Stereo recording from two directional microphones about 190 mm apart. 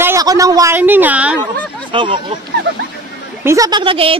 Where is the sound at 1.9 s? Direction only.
25° right (ahead or behind).